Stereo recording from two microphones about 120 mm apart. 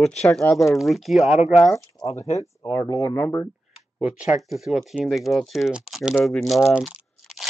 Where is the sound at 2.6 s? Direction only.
30° left (ahead or behind).